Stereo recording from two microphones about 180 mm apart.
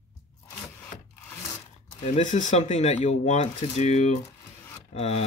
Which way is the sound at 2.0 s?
40° left (ahead or behind).